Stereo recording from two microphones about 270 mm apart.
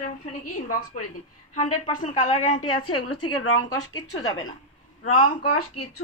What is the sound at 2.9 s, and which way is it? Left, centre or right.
Speech, left.